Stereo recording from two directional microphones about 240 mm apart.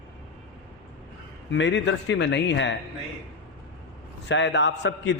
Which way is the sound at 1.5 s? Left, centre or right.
Left.